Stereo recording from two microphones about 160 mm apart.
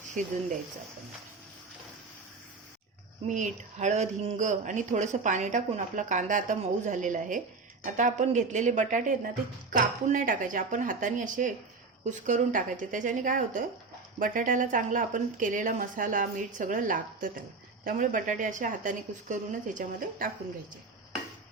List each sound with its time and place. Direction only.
3.2 s speech: 50° right (ahead or behind)